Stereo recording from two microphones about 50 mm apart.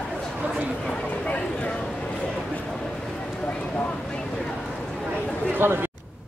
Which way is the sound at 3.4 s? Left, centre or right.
Left.